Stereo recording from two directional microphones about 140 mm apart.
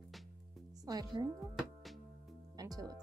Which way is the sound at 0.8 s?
25° right (ahead or behind).